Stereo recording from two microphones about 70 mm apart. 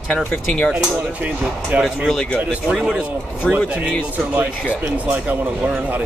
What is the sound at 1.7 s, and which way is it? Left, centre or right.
Speech, right.